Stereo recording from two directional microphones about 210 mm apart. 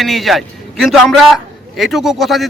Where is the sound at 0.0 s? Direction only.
Centre (ahead or behind).